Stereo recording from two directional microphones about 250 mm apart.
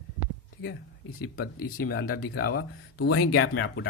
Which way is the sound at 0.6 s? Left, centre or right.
Left.